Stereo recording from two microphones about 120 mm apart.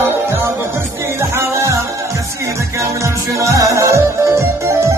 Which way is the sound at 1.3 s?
25° right (ahead or behind).